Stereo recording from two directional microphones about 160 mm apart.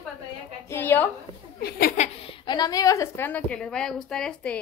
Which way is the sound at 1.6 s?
75° left (ahead or behind).